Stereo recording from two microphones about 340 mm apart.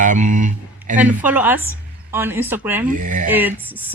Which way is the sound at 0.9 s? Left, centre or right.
Centre.